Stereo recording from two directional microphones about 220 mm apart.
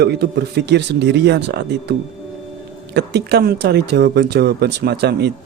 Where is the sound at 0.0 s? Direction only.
50° right (ahead or behind).